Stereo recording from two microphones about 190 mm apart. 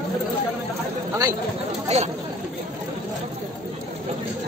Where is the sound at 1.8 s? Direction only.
35° right (ahead or behind).